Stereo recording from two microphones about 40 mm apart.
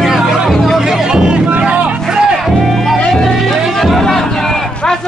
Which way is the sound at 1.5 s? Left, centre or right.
Right.